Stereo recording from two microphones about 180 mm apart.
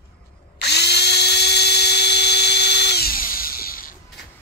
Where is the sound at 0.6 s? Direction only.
65° left (ahead or behind).